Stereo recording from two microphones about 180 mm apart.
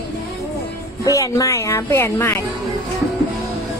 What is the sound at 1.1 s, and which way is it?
Speech, 20° left (ahead or behind).